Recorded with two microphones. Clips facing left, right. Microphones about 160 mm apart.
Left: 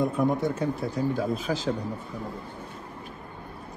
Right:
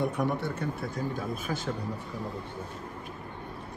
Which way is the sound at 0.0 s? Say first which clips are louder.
Left 5 dB; 75° right (ahead or behind).